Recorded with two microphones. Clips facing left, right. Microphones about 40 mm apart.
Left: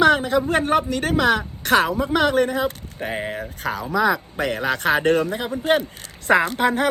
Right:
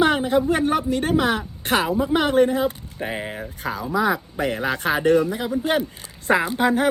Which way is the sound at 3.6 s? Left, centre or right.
Left.